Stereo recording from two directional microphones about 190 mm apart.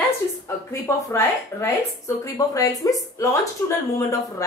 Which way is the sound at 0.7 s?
15° left (ahead or behind).